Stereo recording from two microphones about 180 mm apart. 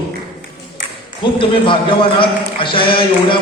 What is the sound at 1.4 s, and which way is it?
A man's voice, 30° left (ahead or behind).